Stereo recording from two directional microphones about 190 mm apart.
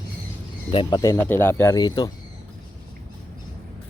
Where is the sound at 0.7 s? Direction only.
25° left (ahead or behind).